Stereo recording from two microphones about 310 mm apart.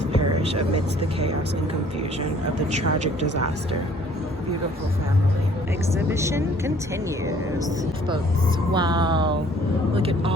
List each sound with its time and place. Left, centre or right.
2.7 s speech: right
6.1 s speech: centre
8.7 s speech: centre